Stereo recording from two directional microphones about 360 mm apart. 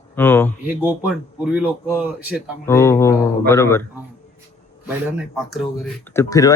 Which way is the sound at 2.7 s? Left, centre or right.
Centre.